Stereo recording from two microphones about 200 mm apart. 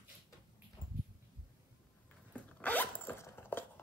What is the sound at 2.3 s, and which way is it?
Zipper, 10° left (ahead or behind).